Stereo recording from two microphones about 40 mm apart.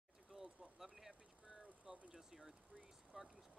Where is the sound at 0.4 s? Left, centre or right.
Centre.